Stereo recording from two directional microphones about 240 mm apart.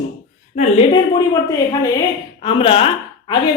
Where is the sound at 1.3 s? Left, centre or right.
Centre.